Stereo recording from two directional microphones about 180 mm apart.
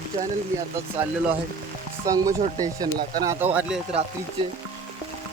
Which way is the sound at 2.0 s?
20° right (ahead or behind).